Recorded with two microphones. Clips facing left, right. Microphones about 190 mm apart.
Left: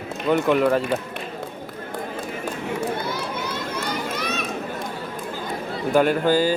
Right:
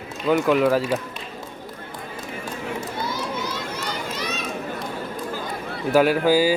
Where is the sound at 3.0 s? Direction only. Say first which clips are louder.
Even; 55° left (ahead or behind).